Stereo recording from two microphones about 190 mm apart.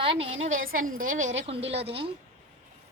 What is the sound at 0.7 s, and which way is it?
Speech, 45° right (ahead or behind).